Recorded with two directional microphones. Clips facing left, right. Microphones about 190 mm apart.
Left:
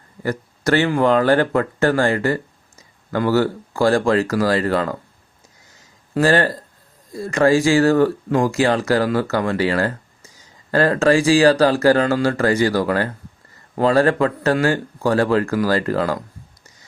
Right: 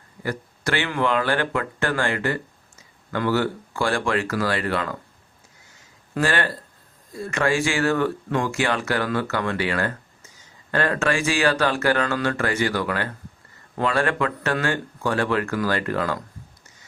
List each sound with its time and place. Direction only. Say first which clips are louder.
0.2 s speech: left 5 dB; 40° left (ahead or behind)
6.1 s speech: left 7 dB; 40° left (ahead or behind)